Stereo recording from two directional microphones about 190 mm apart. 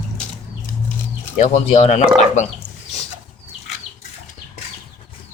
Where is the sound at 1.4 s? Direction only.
30° left (ahead or behind).